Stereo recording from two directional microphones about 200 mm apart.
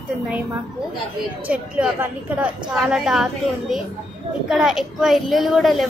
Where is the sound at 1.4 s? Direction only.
5° right (ahead or behind).